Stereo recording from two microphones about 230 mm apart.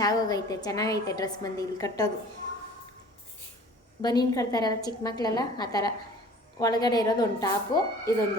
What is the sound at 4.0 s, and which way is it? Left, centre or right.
A woman's voice, centre.